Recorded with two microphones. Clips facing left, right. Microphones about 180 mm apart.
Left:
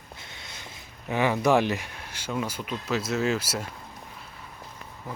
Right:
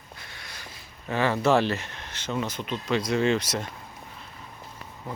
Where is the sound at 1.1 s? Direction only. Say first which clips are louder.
Even; 15° left (ahead or behind).